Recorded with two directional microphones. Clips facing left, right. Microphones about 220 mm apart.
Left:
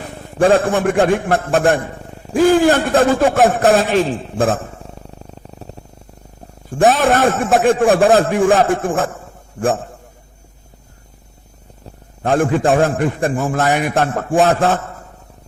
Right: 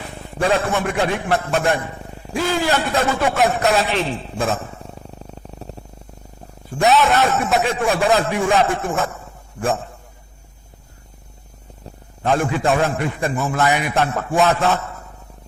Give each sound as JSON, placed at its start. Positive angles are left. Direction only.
{"t": 0.3, "sound": "a man's voice", "side_deg": 50}
{"t": 5.2, "sound": "purr", "side_deg": 0}
{"t": 6.7, "sound": "a man's voice", "side_deg": 50}
{"t": 12.2, "sound": "a man's voice", "side_deg": 50}